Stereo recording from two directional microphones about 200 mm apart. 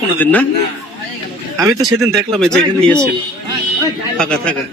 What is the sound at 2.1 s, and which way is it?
Speech, centre (ahead or behind).